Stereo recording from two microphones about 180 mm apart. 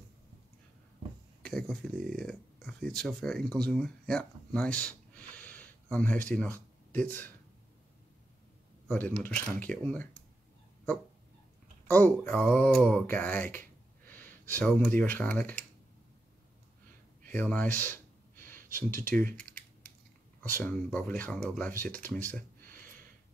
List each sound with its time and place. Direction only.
1.4 s speech: 5° left (ahead or behind)
8.8 s speech: 10° left (ahead or behind)
11.9 s speech: 10° left (ahead or behind)
17.3 s a sound: 10° left (ahead or behind)
19.3 s typing: 5° left (ahead or behind)
20.5 s speech: 10° left (ahead or behind)
22.7 s a sound: 50° right (ahead or behind)